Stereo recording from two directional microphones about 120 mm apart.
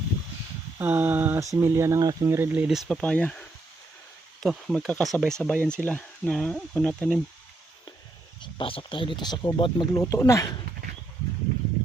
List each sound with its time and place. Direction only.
0.8 s a sound: 20° right (ahead or behind)
1.5 s speech: 25° right (ahead or behind); by 2.8 s 5° right (ahead or behind)
2.8 s speech: 10° left (ahead or behind)
4.4 s speech: centre (ahead or behind)
8.4 s speech: 45° left (ahead or behind)
10.0 s speech: 25° left (ahead or behind)